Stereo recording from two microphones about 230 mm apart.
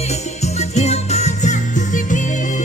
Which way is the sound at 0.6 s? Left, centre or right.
Left.